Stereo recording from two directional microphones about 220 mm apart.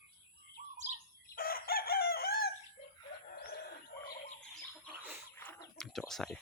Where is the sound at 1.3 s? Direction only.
40° left (ahead or behind).